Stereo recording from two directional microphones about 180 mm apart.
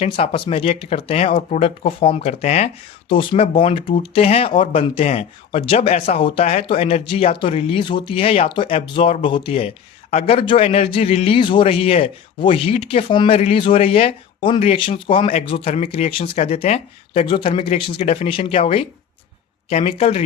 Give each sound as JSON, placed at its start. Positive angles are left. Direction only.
{"t": 0.0, "sound": "speech", "side_deg": 30}